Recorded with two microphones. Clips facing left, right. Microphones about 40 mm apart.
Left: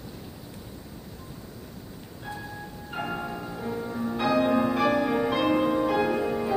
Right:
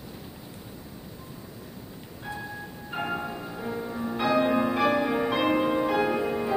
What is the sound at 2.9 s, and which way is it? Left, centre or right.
Church bell, centre.